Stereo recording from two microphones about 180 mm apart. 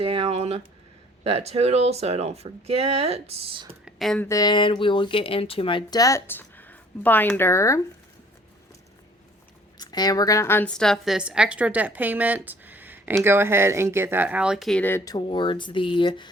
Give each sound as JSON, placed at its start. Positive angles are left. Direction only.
{"t": 0.0, "sound": "speech", "side_deg": -30}
{"t": 3.8, "sound": "speech", "side_deg": 0}
{"t": 4.3, "sound": "speech", "side_deg": 20}
{"t": 9.7, "sound": "a woman's voice", "side_deg": 20}